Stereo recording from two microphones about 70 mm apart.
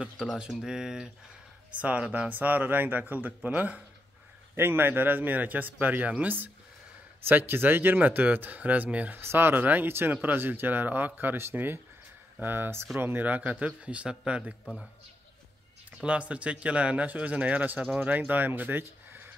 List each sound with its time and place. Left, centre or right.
0.5 s a man's voice: centre
1.8 s speech: centre
4.6 s speech: right
9.2 s speech: right; by 14.5 s centre
16.0 s a man's voice: centre